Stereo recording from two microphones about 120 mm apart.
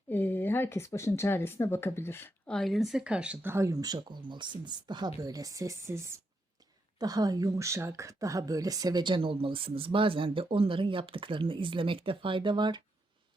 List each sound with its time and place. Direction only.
0.1 s speech: 15° left (ahead or behind)
2.5 s a woman's voice: 5° left (ahead or behind)
3.5 s speech: 25° right (ahead or behind)